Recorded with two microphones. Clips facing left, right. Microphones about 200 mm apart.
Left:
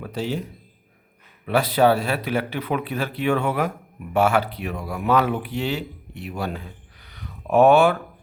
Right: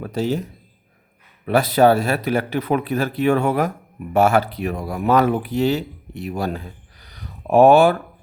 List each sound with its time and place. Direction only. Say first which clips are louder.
0.0 s speech: right 5 dB; 45° right (ahead or behind)
1.5 s speech: right 3 dB; 45° right (ahead or behind)